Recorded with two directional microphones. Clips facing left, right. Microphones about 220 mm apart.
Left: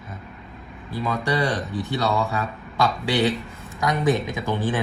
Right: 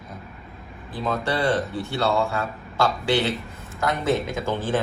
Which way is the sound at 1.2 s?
15° left (ahead or behind).